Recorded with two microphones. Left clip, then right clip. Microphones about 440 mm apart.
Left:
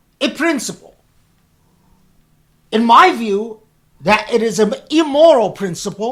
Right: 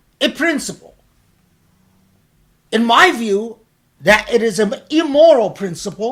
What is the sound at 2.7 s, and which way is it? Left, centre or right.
A woman's voice, left.